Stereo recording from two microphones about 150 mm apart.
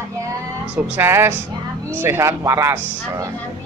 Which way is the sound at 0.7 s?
10° right (ahead or behind).